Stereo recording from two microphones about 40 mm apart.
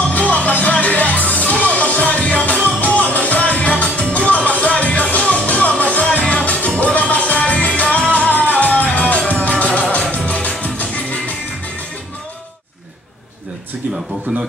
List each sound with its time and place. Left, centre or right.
0.1 s music: left
14.3 s a man's voice: right